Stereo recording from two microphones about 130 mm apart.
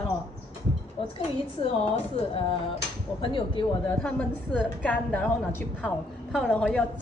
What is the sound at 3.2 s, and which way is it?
Speech, 35° left (ahead or behind).